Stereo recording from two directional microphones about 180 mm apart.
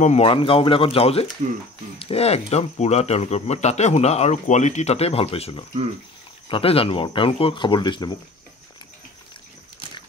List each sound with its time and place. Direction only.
0.0 s speech: 35° left (ahead or behind)